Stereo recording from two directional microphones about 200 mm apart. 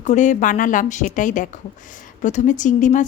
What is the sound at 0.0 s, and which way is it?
Speech, 35° left (ahead or behind).